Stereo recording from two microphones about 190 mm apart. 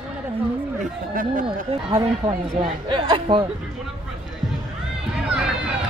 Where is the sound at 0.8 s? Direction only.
45° right (ahead or behind).